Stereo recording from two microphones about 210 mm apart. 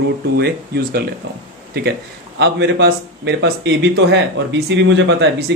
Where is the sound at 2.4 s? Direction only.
55° right (ahead or behind).